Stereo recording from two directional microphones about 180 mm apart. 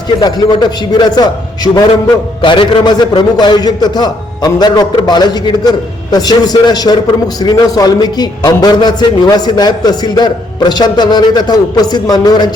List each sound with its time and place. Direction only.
0.2 s a man's voice: 25° left (ahead or behind)